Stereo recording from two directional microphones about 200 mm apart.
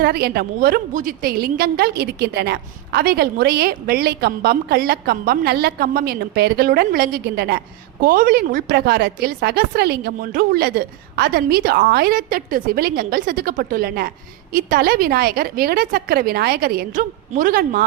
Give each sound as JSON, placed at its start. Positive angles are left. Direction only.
{"t": 0.0, "sound": "a woman's voice", "side_deg": -50}